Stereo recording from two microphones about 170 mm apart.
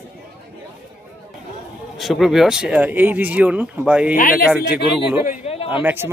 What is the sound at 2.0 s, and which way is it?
Speech, centre (ahead or behind).